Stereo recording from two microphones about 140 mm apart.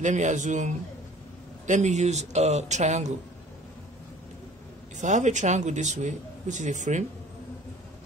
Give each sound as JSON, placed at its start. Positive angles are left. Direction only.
{"t": 0.0, "sound": "a man's voice", "side_deg": -60}
{"t": 4.9, "sound": "a man's voice", "side_deg": -60}